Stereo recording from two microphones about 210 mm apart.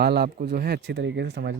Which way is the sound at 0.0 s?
50° right (ahead or behind).